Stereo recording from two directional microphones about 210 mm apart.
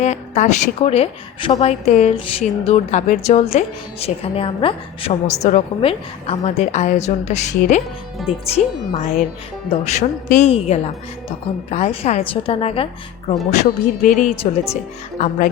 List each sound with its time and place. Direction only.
0.0 s a woman's voice: 35° left (ahead or behind)